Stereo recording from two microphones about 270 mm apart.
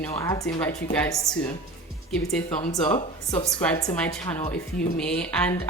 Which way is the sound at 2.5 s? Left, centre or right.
Left.